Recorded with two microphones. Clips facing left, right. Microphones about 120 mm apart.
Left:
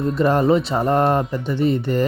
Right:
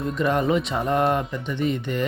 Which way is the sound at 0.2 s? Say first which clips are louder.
Left 5 dB; 35° left (ahead or behind).